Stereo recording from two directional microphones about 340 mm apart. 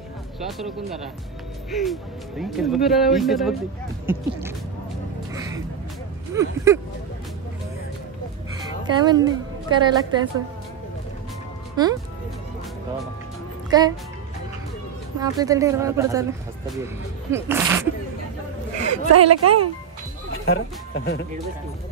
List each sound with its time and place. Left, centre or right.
0.5 s speech: centre
6.3 s speech: centre
8.5 s a sound: centre
9.8 s speech: centre
11.7 s speech: centre
13.7 s speech: centre
15.1 s speech: centre
18.9 s a woman's voice: right
20.3 s speech: left